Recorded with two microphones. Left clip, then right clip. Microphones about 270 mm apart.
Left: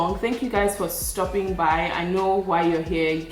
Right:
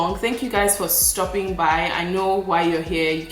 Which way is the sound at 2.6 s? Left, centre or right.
Centre.